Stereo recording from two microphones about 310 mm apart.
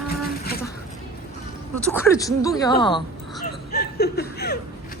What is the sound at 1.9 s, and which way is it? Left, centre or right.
Speech, centre.